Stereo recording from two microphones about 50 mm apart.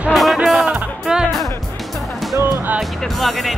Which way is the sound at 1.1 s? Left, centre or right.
Centre.